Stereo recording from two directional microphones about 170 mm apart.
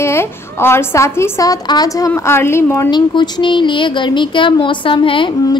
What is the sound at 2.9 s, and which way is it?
A woman's voice, 25° left (ahead or behind).